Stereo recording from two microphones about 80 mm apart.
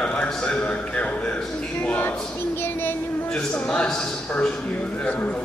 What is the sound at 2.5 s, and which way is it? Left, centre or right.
Child singing, left.